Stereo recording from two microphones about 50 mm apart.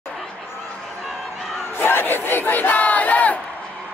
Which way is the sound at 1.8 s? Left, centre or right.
Left.